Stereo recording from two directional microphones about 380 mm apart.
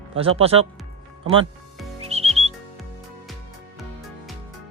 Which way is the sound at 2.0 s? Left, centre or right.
Centre.